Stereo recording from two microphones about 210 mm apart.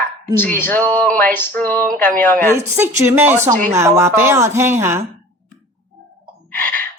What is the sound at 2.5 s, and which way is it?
A woman's voice, 10° right (ahead or behind).